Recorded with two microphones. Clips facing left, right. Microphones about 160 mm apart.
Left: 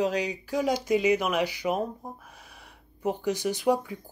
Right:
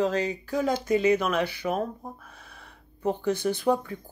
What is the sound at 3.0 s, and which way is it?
Speech, 10° left (ahead or behind).